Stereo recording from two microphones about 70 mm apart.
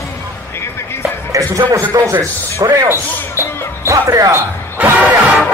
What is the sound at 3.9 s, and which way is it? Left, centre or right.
Speech, right.